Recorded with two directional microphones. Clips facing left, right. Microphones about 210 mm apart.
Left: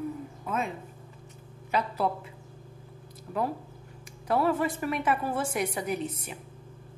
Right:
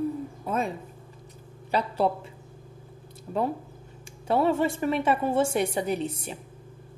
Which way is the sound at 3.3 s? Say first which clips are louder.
Right 3 dB; 25° right (ahead or behind).